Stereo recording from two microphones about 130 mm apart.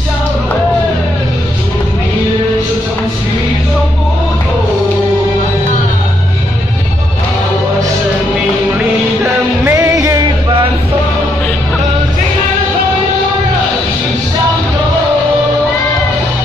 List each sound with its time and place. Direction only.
8.7 s music: 15° right (ahead or behind)